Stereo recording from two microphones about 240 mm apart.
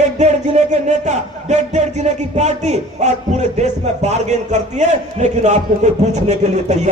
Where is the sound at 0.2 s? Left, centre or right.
Right.